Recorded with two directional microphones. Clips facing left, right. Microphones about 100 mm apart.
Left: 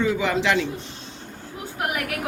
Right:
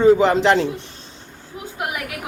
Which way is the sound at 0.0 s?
35° right (ahead or behind).